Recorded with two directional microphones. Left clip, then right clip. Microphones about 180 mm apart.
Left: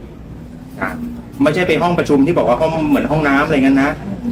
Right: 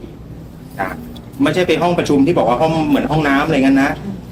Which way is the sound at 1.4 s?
15° left (ahead or behind).